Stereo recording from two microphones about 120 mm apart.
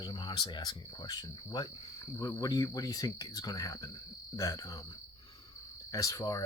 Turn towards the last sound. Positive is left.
turn(degrees=30)  # may be behind; listen again after turning